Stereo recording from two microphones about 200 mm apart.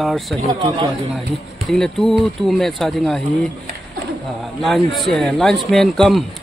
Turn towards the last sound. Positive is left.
turn(degrees=0)  # may be behind; listen again after turning